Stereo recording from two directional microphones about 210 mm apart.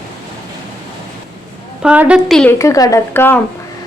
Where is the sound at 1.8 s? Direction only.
5° right (ahead or behind).